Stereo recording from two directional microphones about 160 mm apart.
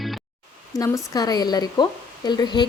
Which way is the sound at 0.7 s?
20° left (ahead or behind).